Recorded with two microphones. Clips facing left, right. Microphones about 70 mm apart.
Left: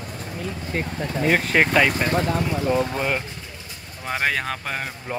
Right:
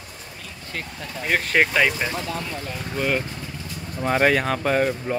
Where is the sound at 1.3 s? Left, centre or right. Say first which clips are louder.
Left 1 dB; centre.